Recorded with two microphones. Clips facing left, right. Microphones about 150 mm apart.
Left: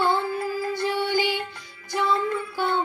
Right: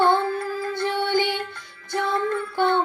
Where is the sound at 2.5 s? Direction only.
65° right (ahead or behind).